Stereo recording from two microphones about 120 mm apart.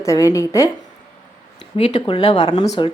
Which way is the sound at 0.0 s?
25° left (ahead or behind).